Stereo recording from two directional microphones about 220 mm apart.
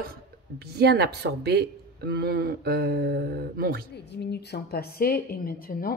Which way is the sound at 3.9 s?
50° left (ahead or behind).